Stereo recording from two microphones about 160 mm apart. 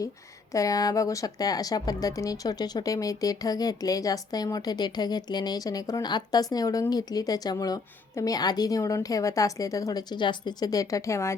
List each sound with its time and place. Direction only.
0.5 s speech: 20° left (ahead or behind)